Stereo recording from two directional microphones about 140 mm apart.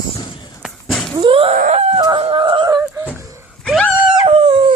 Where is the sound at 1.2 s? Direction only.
40° right (ahead or behind).